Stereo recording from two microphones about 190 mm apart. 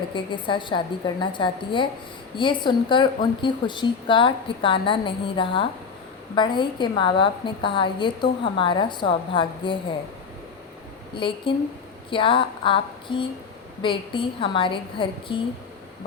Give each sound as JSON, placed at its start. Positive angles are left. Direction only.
{"t": 0.1, "sound": "a woman's voice", "side_deg": 25}
{"t": 11.1, "sound": "a woman's voice", "side_deg": 25}